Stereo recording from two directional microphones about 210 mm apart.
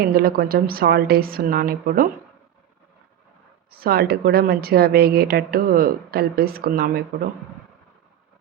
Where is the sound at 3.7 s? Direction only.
45° right (ahead or behind).